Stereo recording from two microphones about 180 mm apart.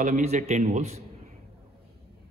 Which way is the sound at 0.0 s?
35° right (ahead or behind).